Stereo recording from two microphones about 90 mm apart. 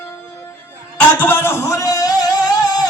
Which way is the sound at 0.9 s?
20° left (ahead or behind).